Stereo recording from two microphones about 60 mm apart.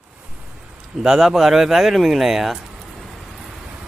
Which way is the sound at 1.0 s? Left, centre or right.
Centre.